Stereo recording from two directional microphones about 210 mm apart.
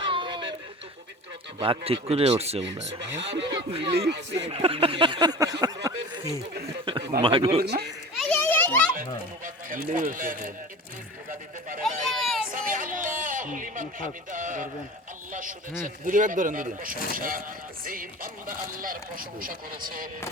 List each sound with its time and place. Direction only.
0.0 s a sound: 25° right (ahead or behind)
1.5 s speech: 25° right (ahead or behind)
3.0 s speech: 55° right (ahead or behind)
3.5 s speech: 25° right (ahead or behind)
3.9 s speech: 55° right (ahead or behind)
4.4 s speech: 25° right (ahead or behind)
7.6 s speech: 50° right (ahead or behind)
8.1 s children playing: 5° left (ahead or behind)
9.0 s music: 40° right (ahead or behind)
11.8 s a sound: centre (ahead or behind)
12.5 s a sound: 40° right (ahead or behind)
14.3 s speech: 40° right (ahead or behind)